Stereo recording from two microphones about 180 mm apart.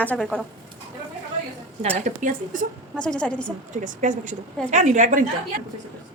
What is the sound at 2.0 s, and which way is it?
Speech, 45° right (ahead or behind).